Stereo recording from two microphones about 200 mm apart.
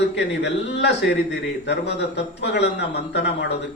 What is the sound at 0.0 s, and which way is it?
A man's voice, 60° left (ahead or behind).